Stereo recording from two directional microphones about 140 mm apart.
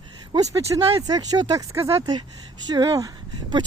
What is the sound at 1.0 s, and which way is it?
Speech, 25° right (ahead or behind).